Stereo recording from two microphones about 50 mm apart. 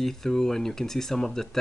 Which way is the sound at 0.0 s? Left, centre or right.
Centre.